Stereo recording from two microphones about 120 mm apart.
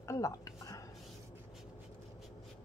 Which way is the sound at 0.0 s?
25° left (ahead or behind).